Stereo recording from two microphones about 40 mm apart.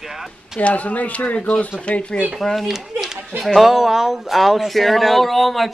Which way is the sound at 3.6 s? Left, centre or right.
Centre.